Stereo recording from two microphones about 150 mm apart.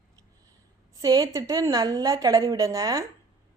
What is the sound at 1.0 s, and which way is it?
A woman's voice, 25° right (ahead or behind).